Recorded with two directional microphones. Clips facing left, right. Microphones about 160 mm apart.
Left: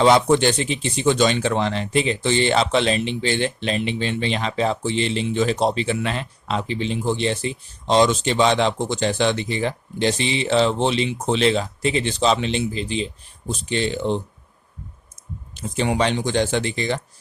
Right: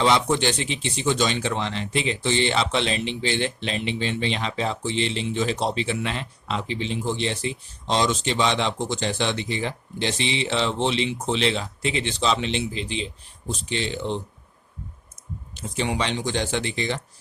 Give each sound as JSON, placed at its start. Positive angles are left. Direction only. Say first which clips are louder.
{"t": 0.0, "sound": "speech", "louder": "left 5 dB", "side_deg": 50}
{"t": 15.8, "sound": "speech", "louder": "left 5 dB", "side_deg": 45}